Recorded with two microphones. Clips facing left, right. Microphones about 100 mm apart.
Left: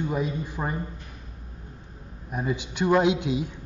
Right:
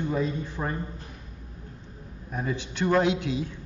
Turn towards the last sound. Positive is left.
turn(degrees=15)  # may be behind; listen again after turning